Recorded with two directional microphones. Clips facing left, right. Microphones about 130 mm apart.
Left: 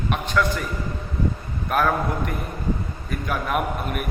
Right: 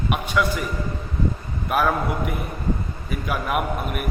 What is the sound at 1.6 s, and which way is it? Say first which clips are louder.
A man's voice: even; 5° right (ahead or behind).